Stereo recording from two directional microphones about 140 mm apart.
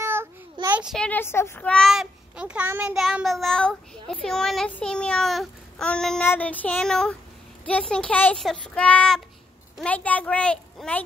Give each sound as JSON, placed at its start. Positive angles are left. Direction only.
{"t": 0.0, "sound": "child singing", "side_deg": -15}
{"t": 0.7, "sound": "a sound", "side_deg": -10}
{"t": 0.9, "sound": "a child's voice", "side_deg": 10}
{"t": 1.7, "sound": "child singing", "side_deg": 0}
{"t": 3.0, "sound": "a child's voice", "side_deg": 0}